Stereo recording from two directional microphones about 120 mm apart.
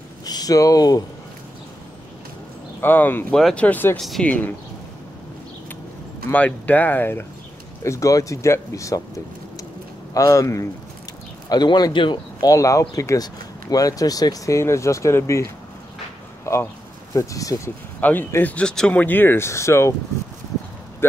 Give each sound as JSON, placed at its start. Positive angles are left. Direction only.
{"t": 0.2, "sound": "speech", "side_deg": 30}
{"t": 2.8, "sound": "speech", "side_deg": 15}
{"t": 3.3, "sound": "speech", "side_deg": 5}
{"t": 4.0, "sound": "speech", "side_deg": 0}
{"t": 4.3, "sound": "speech", "side_deg": 15}
{"t": 6.3, "sound": "speech", "side_deg": 15}
{"t": 10.1, "sound": "speech", "side_deg": 25}
{"t": 11.4, "sound": "speech", "side_deg": 35}
{"t": 16.5, "sound": "a sound", "side_deg": 25}
{"t": 17.1, "sound": "speech", "side_deg": 30}
{"t": 18.0, "sound": "speech", "side_deg": 15}
{"t": 21.0, "sound": "speech", "side_deg": 20}